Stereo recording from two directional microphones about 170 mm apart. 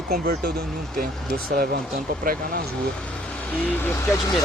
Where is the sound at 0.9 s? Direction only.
60° right (ahead or behind).